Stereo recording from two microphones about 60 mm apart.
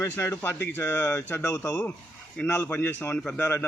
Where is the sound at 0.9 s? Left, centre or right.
Left.